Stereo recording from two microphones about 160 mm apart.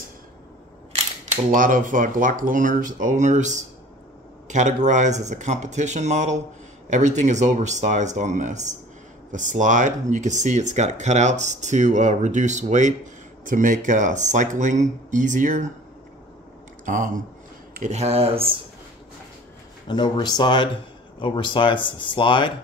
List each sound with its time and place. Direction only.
1.5 s speech: 55° right (ahead or behind)
16.8 s speech: 55° right (ahead or behind); by 18.6 s 35° right (ahead or behind)
19.9 s speech: 25° left (ahead or behind)